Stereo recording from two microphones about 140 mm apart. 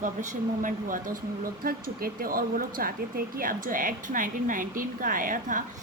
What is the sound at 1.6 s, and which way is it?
A woman's voice, 90° right.